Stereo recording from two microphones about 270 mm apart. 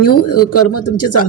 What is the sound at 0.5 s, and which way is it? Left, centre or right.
Speech, left.